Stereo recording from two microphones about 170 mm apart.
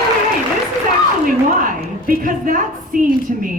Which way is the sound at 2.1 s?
55° right (ahead or behind).